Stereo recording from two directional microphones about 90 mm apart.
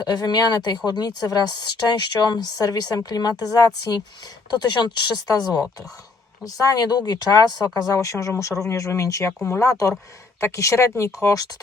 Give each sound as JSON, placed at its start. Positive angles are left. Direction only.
{"t": 0.0, "sound": "speech", "side_deg": 50}
{"t": 7.9, "sound": "speech", "side_deg": 35}